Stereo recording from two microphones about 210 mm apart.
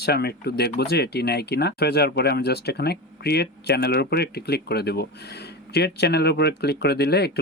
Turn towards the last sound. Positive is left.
turn(degrees=50)  # may be behind; listen again after turning